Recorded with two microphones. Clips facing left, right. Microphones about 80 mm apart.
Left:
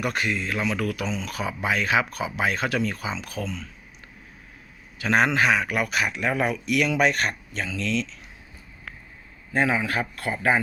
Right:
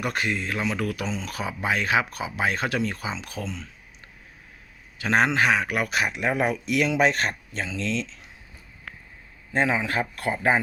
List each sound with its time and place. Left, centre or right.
0.0 s speech: right
4.9 s speech: right
9.5 s speech: right